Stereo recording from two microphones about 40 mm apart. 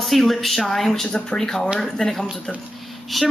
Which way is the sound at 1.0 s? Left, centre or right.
Left.